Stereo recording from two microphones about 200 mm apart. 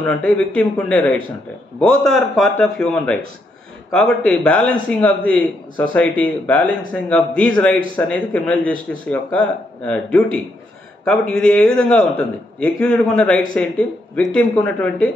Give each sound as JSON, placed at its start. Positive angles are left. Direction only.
{"t": 0.6, "sound": "a man's voice", "side_deg": 5}